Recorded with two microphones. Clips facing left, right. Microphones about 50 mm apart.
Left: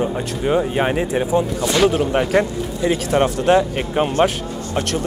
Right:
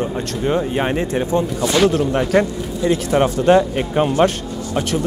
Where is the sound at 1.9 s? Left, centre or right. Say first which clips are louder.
Right 1 dB; centre.